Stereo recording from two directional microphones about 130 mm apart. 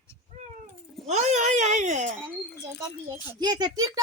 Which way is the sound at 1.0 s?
60° right (ahead or behind).